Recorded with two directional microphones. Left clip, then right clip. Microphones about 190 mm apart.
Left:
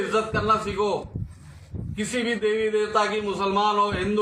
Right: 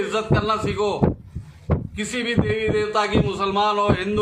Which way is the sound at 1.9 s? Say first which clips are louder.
Right 1 dB; 20° right (ahead or behind).